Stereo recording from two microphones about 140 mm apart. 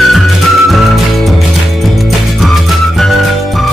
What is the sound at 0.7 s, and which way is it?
Music, centre (ahead or behind).